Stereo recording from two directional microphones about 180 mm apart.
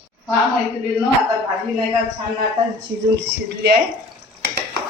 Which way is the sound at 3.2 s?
75° right (ahead or behind).